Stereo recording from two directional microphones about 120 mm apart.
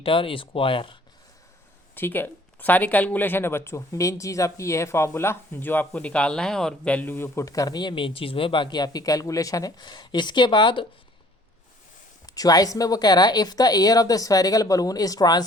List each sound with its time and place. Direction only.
0.0 s speech: 45° left (ahead or behind)
2.0 s speech: 15° left (ahead or behind); by 10.8 s 40° left (ahead or behind)
12.2 s a woman's voice: 30° left (ahead or behind)